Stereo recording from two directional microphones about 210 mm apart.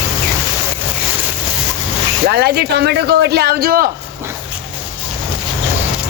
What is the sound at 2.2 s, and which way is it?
Speech, 50° right (ahead or behind).